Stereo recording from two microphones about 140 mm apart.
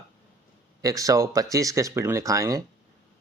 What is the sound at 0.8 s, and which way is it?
Speech, 25° right (ahead or behind).